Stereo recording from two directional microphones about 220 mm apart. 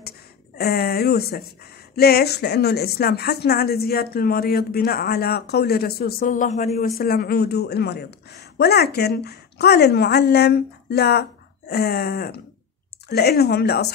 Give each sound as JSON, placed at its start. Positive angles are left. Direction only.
{"t": 0.6, "sound": "a woman's voice", "side_deg": 45}